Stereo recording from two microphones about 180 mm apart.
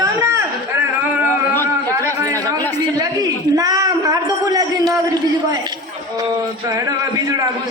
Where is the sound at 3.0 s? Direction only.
20° right (ahead or behind).